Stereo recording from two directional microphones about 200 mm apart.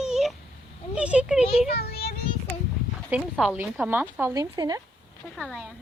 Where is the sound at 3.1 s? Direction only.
5° right (ahead or behind).